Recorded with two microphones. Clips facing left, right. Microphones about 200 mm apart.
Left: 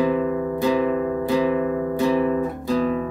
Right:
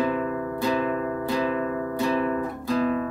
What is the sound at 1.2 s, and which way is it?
Music, 15° left (ahead or behind).